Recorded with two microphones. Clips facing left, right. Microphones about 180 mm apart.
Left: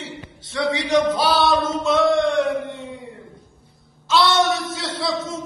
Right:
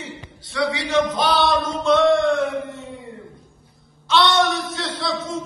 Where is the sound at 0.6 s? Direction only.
20° left (ahead or behind).